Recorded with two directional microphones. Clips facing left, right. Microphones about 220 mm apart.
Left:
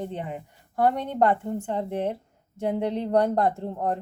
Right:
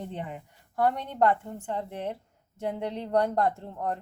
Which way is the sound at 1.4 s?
25° left (ahead or behind).